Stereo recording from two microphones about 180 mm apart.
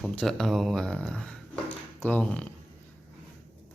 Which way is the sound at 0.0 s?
Centre (ahead or behind).